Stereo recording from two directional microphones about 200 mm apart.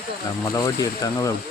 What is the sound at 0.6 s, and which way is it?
Speech, 15° left (ahead or behind).